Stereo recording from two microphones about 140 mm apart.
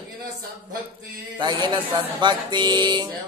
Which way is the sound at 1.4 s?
30° right (ahead or behind).